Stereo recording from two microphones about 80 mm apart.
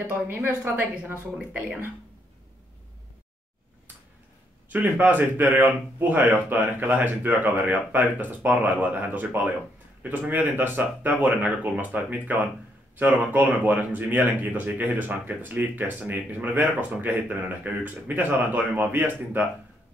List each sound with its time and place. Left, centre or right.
0.1 s speech: right
4.6 s speech: right